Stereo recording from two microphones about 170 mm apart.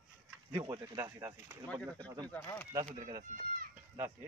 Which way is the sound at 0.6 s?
20° right (ahead or behind).